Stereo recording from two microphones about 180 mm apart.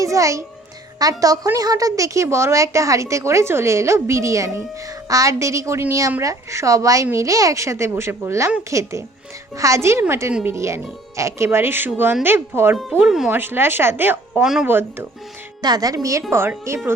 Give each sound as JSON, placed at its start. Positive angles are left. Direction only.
{"t": 0.0, "sound": "a child's voice", "side_deg": -15}